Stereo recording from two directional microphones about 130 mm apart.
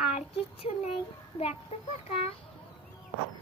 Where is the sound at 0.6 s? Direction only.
55° left (ahead or behind).